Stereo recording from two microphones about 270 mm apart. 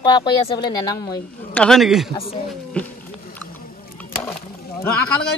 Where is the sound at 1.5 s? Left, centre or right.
Centre.